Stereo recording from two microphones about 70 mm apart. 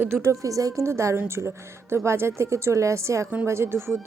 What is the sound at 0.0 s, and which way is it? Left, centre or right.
Speech, right.